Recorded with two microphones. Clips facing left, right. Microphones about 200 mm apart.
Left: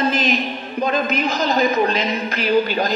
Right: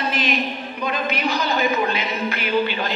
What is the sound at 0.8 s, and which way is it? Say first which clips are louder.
A man's voice: left 4 dB; 45° left (ahead or behind).